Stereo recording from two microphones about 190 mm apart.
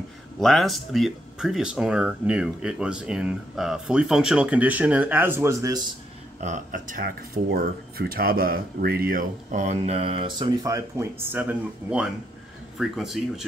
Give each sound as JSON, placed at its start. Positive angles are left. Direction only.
{"t": 0.4, "sound": "speech", "side_deg": 0}
{"t": 6.4, "sound": "speech", "side_deg": -40}